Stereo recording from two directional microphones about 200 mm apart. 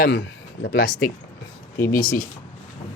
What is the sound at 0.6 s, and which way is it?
Speech, 50° left (ahead or behind).